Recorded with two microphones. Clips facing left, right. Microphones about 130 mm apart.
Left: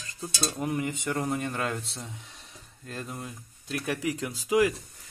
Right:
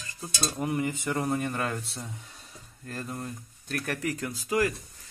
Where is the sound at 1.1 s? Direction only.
10° right (ahead or behind).